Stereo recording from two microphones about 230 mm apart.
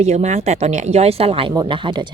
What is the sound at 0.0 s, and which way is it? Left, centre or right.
Speech, right.